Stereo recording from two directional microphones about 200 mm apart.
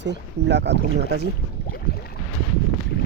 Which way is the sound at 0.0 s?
60° right (ahead or behind).